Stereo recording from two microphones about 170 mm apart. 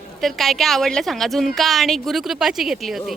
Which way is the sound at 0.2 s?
Centre (ahead or behind).